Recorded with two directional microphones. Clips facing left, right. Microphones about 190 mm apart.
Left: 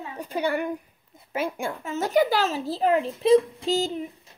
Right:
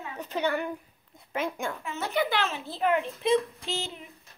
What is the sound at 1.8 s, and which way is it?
A child's voice, 40° left (ahead or behind).